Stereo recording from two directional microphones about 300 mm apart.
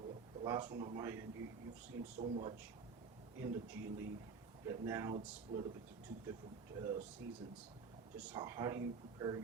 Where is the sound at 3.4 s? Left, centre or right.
Centre.